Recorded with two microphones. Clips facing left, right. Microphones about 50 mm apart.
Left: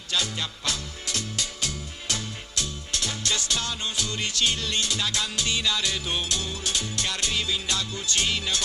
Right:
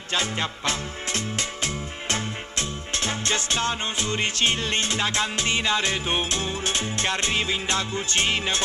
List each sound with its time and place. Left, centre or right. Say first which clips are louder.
0.1 s music: right 3 dB; right